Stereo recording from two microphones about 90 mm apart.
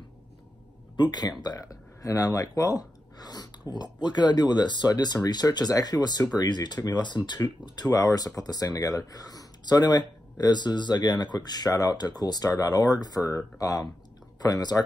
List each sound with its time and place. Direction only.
1.0 s speech: 65° left (ahead or behind)
1.4 s speech: 45° left (ahead or behind)